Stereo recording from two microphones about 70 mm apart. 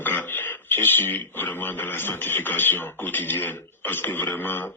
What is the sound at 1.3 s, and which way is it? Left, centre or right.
Beatboxing, left.